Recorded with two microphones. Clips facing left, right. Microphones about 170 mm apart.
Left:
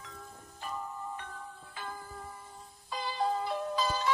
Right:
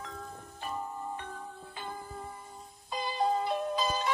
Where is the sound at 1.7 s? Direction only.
25° right (ahead or behind).